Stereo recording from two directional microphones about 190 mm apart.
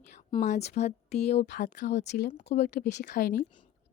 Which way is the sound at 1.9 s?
65° left (ahead or behind).